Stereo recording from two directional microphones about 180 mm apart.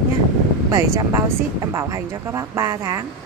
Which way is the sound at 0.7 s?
15° right (ahead or behind).